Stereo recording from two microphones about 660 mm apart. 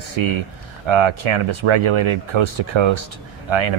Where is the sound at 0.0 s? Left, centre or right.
Right.